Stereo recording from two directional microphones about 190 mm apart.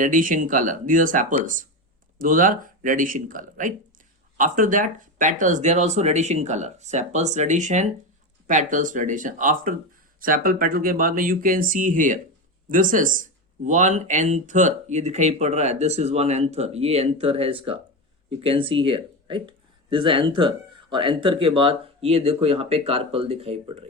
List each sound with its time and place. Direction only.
0.0 s speech: 45° right (ahead or behind)